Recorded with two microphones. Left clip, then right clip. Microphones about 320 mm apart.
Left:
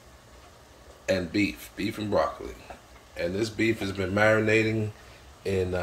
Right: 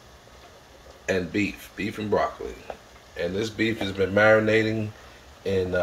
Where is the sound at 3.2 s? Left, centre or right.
Left.